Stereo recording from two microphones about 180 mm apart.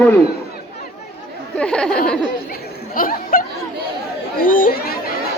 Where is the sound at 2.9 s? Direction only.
50° left (ahead or behind).